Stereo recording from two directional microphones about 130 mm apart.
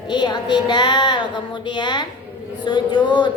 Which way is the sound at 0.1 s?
35° left (ahead or behind).